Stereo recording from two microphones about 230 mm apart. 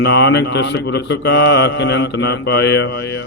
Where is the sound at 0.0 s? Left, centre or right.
Left.